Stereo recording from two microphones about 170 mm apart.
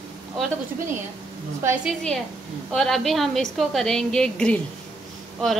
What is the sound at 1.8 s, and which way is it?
A woman's voice, 5° left (ahead or behind).